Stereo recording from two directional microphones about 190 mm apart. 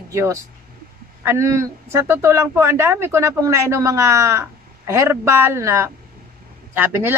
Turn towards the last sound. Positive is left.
turn(degrees=-10)  # may be behind; listen again after turning